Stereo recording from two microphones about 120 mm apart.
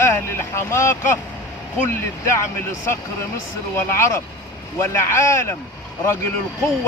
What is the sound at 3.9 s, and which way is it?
Speech, 20° left (ahead or behind).